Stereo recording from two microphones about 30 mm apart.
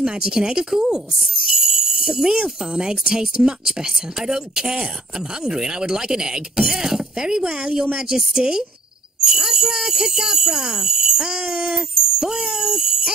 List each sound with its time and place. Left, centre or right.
0.0 s speech: right
1.5 s jingle bell: centre
2.3 s speech: right